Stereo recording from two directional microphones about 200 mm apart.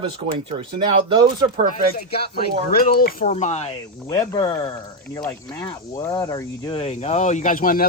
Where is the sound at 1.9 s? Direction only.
50° left (ahead or behind).